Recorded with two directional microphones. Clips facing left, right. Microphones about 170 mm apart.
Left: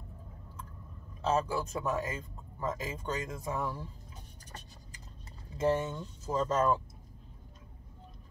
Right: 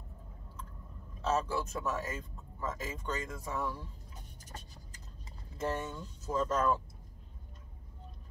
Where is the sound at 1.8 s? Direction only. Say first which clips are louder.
Left 3 dB; 15° left (ahead or behind).